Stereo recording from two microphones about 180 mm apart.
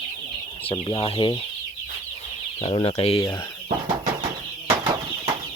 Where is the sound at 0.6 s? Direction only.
30° left (ahead or behind).